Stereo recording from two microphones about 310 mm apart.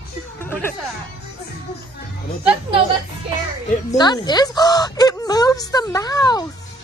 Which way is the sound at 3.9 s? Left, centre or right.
Centre.